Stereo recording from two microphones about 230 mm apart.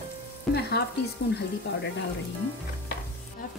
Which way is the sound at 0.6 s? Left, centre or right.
Left.